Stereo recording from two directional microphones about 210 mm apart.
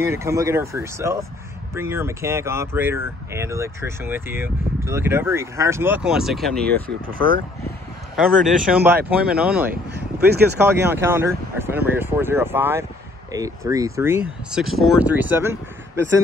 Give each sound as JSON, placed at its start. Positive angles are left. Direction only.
{"t": 0.1, "sound": "speech", "side_deg": -15}
{"t": 7.1, "sound": "speech", "side_deg": -45}
{"t": 8.2, "sound": "speech", "side_deg": 0}
{"t": 9.7, "sound": "speech", "side_deg": -50}
{"t": 10.6, "sound": "speech", "side_deg": -10}